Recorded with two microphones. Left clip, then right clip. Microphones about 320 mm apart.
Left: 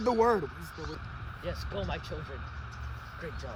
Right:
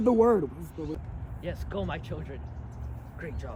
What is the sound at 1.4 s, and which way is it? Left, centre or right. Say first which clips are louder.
Speech: right 2 dB; left.